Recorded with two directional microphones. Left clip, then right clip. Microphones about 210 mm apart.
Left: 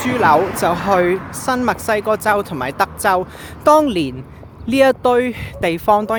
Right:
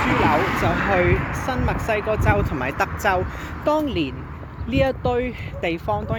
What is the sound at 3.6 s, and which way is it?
Speech, 45° left (ahead or behind).